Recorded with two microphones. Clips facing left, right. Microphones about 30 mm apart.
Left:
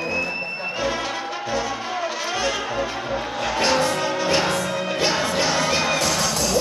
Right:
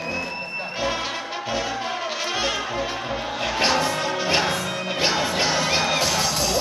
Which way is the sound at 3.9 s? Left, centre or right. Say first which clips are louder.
Left 2 dB; centre.